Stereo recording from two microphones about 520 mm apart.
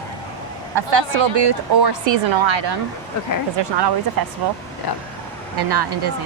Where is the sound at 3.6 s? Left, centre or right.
Right.